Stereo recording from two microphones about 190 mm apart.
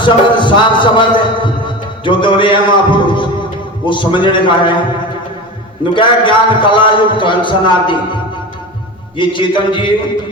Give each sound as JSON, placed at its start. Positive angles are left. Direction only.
{"t": 0.0, "sound": "music", "side_deg": 25}
{"t": 3.8, "sound": "a man's voice", "side_deg": 25}
{"t": 5.8, "sound": "a man's voice", "side_deg": 25}